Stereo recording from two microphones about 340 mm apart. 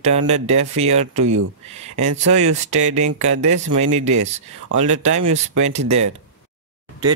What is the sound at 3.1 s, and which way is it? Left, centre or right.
Speech, right.